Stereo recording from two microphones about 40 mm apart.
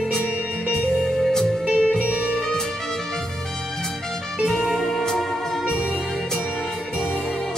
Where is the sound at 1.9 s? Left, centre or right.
Right.